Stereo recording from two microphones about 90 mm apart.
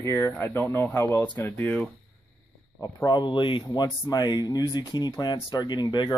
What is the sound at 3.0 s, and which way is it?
Speech, 55° left (ahead or behind).